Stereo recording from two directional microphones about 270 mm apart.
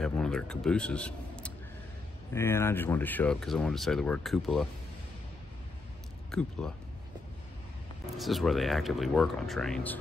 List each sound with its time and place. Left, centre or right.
0.0 s speech: centre
6.6 s speech: centre
8.2 s speech: centre